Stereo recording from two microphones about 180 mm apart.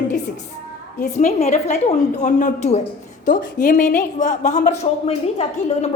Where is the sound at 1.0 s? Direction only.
40° left (ahead or behind).